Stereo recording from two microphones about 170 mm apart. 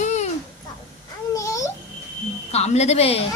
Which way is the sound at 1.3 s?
20° left (ahead or behind).